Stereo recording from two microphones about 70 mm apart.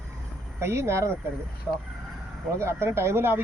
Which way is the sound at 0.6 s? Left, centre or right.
Right.